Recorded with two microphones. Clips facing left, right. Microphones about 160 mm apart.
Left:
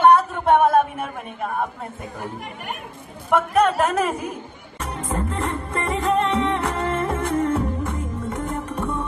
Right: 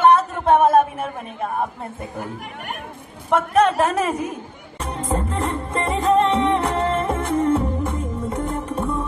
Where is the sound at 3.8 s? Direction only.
20° right (ahead or behind).